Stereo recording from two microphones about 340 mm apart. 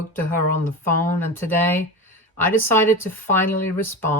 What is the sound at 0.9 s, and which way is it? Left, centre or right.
A woman's voice, centre.